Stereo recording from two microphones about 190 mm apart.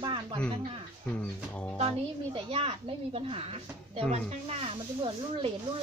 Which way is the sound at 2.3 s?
30° right (ahead or behind).